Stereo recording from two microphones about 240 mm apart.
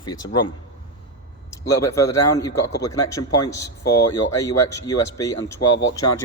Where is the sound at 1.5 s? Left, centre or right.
Centre.